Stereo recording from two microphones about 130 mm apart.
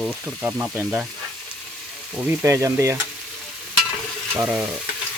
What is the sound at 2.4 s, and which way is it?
Stir, 25° right (ahead or behind).